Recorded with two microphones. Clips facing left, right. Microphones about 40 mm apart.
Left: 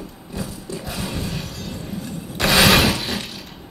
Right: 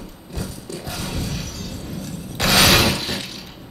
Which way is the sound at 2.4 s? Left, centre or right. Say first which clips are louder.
Left 1 dB; centre.